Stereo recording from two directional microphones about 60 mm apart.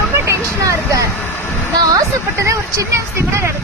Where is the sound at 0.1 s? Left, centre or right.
Right.